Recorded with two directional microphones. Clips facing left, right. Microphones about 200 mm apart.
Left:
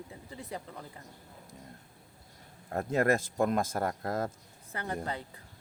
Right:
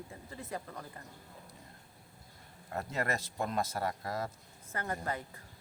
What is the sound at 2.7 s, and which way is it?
Speech, 50° left (ahead or behind).